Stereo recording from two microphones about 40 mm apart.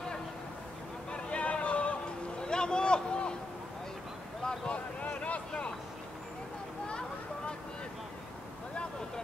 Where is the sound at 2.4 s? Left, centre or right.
Left.